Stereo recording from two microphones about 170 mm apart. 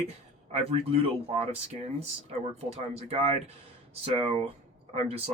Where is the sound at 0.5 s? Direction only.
35° right (ahead or behind).